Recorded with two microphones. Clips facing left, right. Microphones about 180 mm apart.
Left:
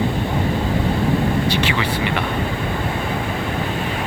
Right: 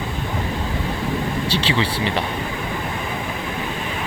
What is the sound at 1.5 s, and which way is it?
Speech, 30° right (ahead or behind).